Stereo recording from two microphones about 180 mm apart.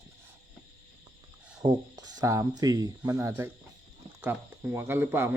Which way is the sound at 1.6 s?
20° right (ahead or behind).